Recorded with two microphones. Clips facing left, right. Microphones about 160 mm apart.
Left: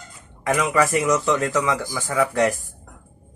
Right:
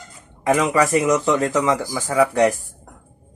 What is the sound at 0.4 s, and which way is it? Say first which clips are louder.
Speech: right 3 dB; 25° right (ahead or behind).